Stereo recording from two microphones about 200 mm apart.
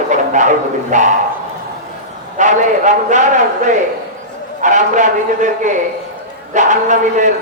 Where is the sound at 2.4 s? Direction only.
40° right (ahead or behind).